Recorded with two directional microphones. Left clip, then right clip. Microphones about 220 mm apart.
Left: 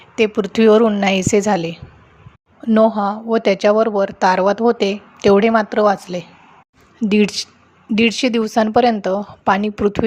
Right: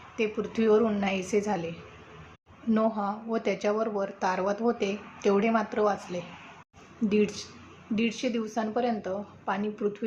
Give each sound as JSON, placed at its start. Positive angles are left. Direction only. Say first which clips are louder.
{"t": 0.2, "sound": "speech", "louder": "left 13 dB", "side_deg": 45}